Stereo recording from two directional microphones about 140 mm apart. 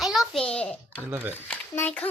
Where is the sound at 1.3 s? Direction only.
15° left (ahead or behind).